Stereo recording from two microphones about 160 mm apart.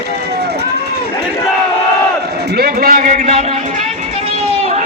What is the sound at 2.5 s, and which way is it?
Speech, 75° right (ahead or behind).